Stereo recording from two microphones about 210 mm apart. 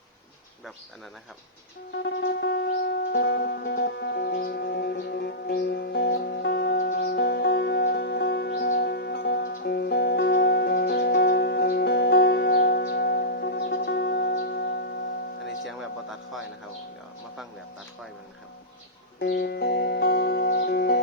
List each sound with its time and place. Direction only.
2.0 s music: 50° left (ahead or behind)
15.6 s music: centre (ahead or behind)
19.2 s music: 50° left (ahead or behind)